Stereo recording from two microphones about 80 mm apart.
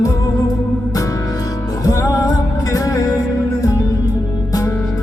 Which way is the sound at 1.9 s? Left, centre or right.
Left.